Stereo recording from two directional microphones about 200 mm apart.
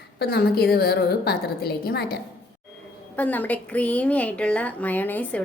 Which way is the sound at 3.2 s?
10° left (ahead or behind).